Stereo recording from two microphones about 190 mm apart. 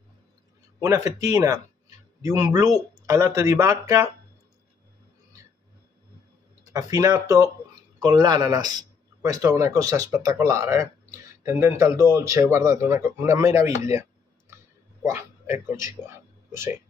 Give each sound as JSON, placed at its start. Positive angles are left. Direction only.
{"t": 0.7, "sound": "speech", "side_deg": -15}
{"t": 6.7, "sound": "speech", "side_deg": -20}
{"t": 15.0, "sound": "a man's voice", "side_deg": -10}